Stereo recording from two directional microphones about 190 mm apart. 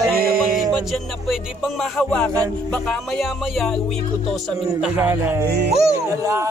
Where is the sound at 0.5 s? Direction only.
Centre (ahead or behind).